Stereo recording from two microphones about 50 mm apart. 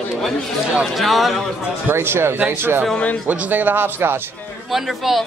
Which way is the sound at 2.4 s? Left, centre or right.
Right.